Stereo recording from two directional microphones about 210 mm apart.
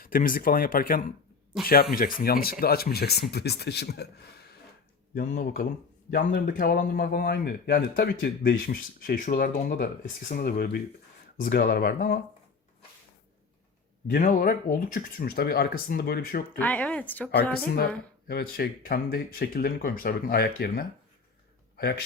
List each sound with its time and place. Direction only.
0.0 s speech: 40° left (ahead or behind)
5.1 s speech: 40° left (ahead or behind)
14.1 s speech: 40° left (ahead or behind)
16.6 s speech: 5° left (ahead or behind)
18.3 s speech: 45° left (ahead or behind)